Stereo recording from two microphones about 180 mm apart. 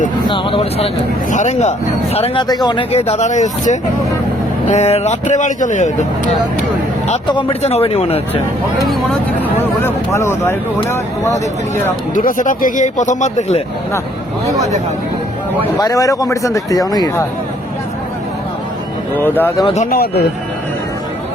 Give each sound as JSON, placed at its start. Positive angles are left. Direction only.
{"t": 0.3, "sound": "speech", "side_deg": 30}
{"t": 2.9, "sound": "speech", "side_deg": 35}
{"t": 7.3, "sound": "speech", "side_deg": 25}
{"t": 8.9, "sound": "speech", "side_deg": 0}
{"t": 9.6, "sound": "speech", "side_deg": 15}
{"t": 12.1, "sound": "speech", "side_deg": 45}
{"t": 14.4, "sound": "speech", "side_deg": -20}
{"t": 15.8, "sound": "speech", "side_deg": 20}
{"t": 19.2, "sound": "speech", "side_deg": 10}
{"t": 19.6, "sound": "speech", "side_deg": 40}
{"t": 19.9, "sound": "a man's voice", "side_deg": 60}